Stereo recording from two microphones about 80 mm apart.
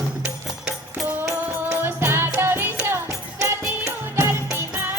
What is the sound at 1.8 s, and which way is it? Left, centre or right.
Music, right.